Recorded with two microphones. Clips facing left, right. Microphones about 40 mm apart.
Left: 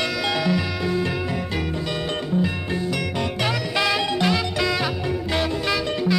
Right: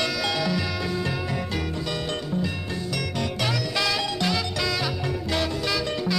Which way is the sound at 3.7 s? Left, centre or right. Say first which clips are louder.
Left 6 dB; left.